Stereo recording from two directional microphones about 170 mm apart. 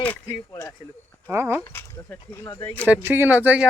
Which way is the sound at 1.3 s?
15° right (ahead or behind).